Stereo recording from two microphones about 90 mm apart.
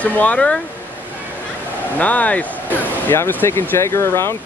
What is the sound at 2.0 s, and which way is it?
Speech, 15° left (ahead or behind).